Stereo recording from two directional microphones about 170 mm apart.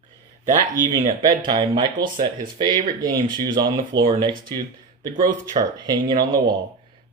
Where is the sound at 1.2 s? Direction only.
25° right (ahead or behind).